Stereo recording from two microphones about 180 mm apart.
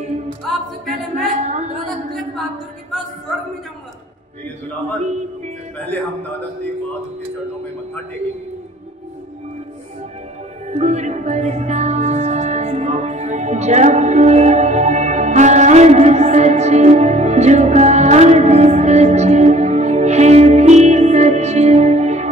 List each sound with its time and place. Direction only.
0.5 s music: centre (ahead or behind)
1.3 s a sound: 40° right (ahead or behind)
10.7 s music: 40° right (ahead or behind)